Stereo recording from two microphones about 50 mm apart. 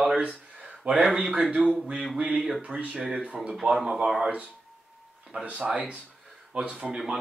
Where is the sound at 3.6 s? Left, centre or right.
Centre.